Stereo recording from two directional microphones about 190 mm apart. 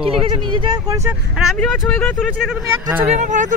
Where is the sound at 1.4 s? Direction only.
Centre (ahead or behind).